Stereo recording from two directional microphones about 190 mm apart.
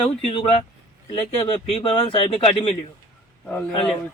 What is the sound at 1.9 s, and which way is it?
Speech, 25° left (ahead or behind).